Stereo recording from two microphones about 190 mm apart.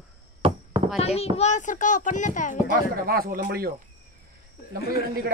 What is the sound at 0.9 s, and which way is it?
Speech, 30° left (ahead or behind).